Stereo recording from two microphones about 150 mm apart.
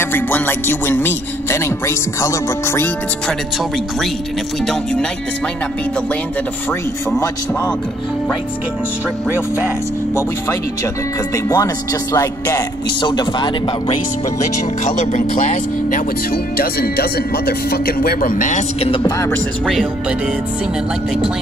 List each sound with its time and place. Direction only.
0.0 s speech: 15° left (ahead or behind)
11.3 s speech: 25° left (ahead or behind)
14.9 s speech: 55° left (ahead or behind)
18.8 s speech: 35° left (ahead or behind)
19.6 s speech: centre (ahead or behind)